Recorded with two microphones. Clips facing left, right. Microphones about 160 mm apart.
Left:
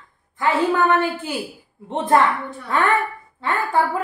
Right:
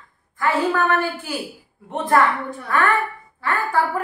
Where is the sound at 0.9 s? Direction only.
20° left (ahead or behind).